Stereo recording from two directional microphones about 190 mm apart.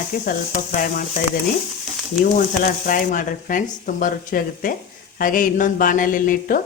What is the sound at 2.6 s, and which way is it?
Speech, 45° left (ahead or behind).